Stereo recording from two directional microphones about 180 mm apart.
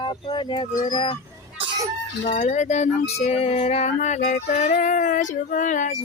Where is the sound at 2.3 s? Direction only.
40° left (ahead or behind).